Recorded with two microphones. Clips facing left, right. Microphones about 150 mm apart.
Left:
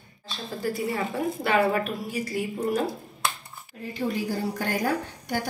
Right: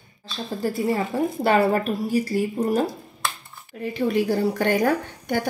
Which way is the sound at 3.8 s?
70° right (ahead or behind).